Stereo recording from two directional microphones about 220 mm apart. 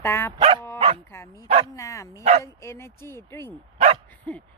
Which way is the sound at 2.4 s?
10° left (ahead or behind).